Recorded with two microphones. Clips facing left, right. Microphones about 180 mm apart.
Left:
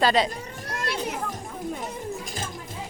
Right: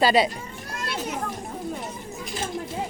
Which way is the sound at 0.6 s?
60° left (ahead or behind).